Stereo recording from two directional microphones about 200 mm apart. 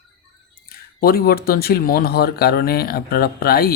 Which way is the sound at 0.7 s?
50° left (ahead or behind).